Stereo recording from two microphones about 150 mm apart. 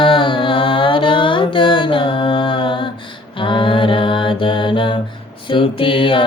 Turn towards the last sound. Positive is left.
turn(degrees=35)  # may be behind; listen again after turning